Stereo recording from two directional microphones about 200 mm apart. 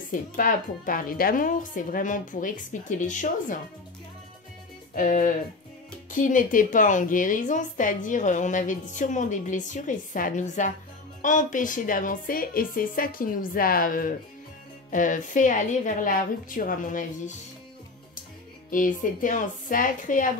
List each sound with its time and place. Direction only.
0.1 s a woman's voice: 45° left (ahead or behind)
4.9 s a woman's voice: 40° left (ahead or behind)
18.7 s a woman's voice: 40° left (ahead or behind)